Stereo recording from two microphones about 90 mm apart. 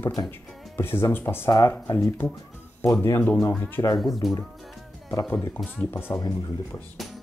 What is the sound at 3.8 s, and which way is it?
Speech, 45° left (ahead or behind).